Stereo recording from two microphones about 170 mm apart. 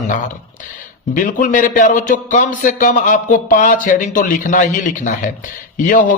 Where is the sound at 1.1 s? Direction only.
50° left (ahead or behind).